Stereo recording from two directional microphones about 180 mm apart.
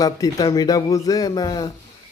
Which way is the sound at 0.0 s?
20° left (ahead or behind).